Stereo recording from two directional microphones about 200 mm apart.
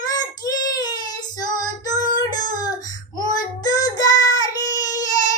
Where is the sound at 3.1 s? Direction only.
20° left (ahead or behind).